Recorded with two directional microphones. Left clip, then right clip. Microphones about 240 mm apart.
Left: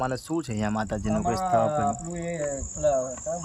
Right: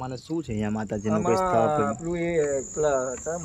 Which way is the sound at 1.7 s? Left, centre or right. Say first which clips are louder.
Right 1 dB; centre.